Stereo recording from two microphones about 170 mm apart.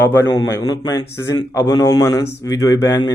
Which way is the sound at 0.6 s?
25° left (ahead or behind).